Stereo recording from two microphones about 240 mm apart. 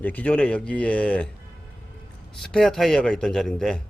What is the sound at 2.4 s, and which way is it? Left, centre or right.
Speech, centre.